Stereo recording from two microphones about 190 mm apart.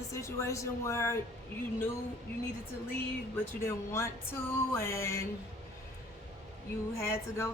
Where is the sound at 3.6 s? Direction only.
15° left (ahead or behind).